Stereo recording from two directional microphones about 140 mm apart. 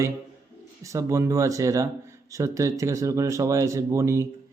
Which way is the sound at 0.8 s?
20° right (ahead or behind).